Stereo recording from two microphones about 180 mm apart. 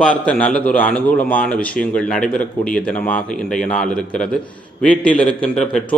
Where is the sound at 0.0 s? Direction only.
5° left (ahead or behind).